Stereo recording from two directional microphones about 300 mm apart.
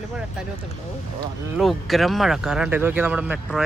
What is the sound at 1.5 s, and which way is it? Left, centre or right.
Speech, centre.